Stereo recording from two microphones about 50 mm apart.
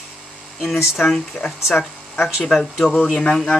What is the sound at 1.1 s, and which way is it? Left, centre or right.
Speech, centre.